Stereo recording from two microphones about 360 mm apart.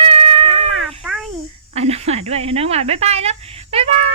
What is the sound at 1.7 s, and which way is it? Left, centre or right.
Speech, centre.